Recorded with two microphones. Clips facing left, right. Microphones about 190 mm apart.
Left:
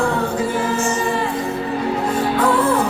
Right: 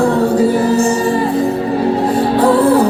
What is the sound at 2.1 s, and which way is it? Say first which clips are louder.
Music: right 5 dB; 35° right (ahead or behind).